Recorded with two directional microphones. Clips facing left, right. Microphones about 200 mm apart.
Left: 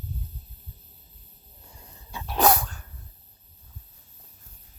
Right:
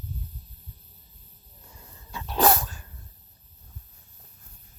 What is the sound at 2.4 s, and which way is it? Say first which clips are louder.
Dog: left 1 dB; centre (ahead or behind).